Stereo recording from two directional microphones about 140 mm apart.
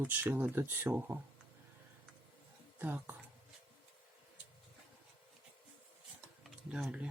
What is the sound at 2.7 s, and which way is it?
Speech, 15° right (ahead or behind).